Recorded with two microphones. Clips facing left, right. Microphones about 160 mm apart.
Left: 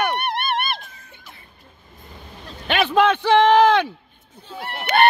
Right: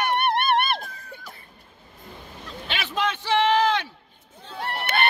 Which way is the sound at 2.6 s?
55° left (ahead or behind).